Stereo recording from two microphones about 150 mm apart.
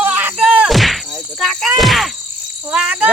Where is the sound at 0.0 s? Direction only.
15° right (ahead or behind).